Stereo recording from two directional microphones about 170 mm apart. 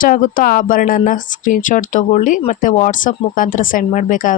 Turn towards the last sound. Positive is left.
turn(degrees=50)  # may be behind; listen again after turning